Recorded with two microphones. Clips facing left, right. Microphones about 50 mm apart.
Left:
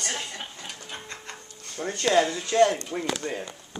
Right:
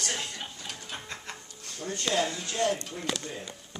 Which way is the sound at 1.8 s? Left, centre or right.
Left.